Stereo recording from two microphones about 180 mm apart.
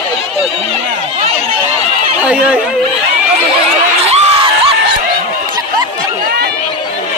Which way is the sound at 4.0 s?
35° right (ahead or behind).